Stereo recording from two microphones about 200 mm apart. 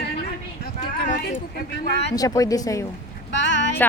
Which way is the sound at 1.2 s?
45° left (ahead or behind).